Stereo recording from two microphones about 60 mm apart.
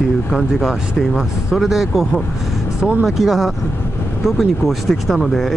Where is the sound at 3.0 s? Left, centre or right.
Centre.